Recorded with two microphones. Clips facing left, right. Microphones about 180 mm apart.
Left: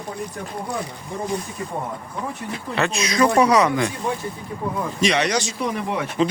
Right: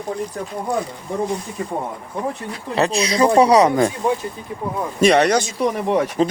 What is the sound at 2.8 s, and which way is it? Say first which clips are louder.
Speech: right 3 dB; 30° right (ahead or behind).